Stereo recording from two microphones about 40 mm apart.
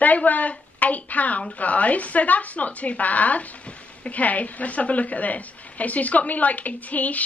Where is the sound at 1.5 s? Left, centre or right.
Left.